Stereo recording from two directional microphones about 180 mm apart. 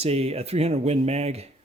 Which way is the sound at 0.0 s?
35° right (ahead or behind).